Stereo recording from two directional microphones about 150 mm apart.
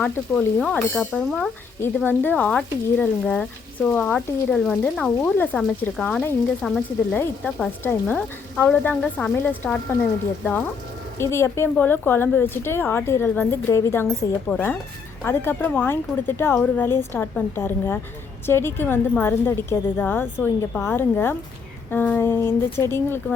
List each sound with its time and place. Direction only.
0.0 s speech: 5° left (ahead or behind)